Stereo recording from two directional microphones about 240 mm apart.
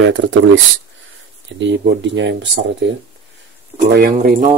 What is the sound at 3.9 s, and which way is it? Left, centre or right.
Speech, right.